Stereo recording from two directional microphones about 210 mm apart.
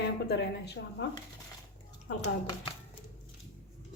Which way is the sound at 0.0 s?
55° left (ahead or behind).